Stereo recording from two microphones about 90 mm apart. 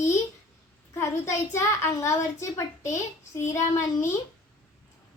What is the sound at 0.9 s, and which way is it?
A child's voice, 35° left (ahead or behind).